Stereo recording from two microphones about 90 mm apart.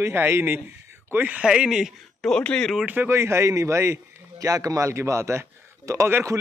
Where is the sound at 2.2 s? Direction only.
10° left (ahead or behind).